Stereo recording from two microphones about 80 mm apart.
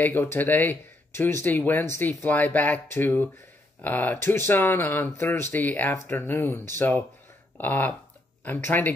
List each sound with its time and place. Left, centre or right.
0.0 s speech: left